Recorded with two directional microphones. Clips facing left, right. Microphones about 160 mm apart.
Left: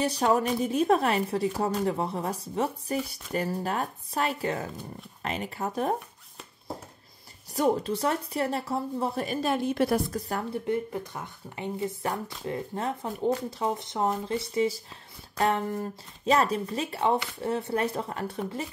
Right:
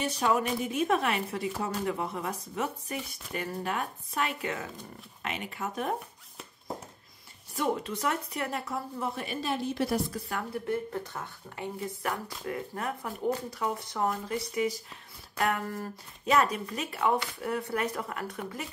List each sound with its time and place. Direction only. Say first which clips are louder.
0.0 s a woman's voice: left 3 dB; 35° left (ahead or behind)
7.5 s a woman's voice: left 5 dB; 35° left (ahead or behind)
10.7 s speech: left 2 dB; 15° left (ahead or behind)